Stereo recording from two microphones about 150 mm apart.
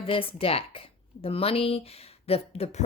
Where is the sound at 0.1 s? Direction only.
40° left (ahead or behind).